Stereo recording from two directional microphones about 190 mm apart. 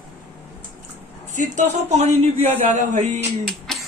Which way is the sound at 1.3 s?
40° right (ahead or behind).